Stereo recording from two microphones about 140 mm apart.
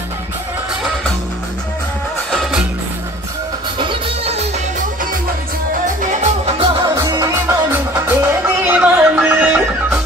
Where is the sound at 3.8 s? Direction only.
40° right (ahead or behind).